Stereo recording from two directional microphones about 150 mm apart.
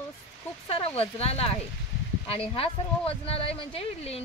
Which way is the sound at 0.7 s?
40° left (ahead or behind).